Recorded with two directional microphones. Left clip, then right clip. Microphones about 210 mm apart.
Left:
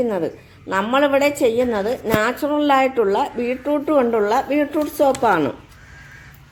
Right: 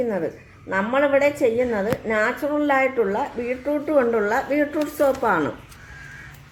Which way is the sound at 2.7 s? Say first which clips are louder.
Left 4 dB; 50° left (ahead or behind).